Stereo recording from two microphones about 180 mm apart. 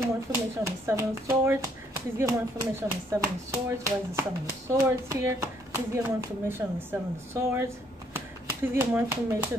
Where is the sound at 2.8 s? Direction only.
10° right (ahead or behind).